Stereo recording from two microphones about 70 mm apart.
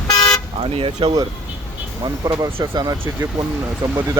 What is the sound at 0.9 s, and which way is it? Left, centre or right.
Speech, right.